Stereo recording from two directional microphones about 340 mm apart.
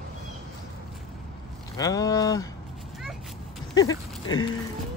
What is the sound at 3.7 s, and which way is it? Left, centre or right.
Speech, centre.